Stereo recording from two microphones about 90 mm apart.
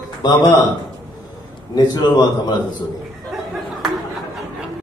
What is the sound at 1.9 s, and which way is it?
Speech, 45° left (ahead or behind).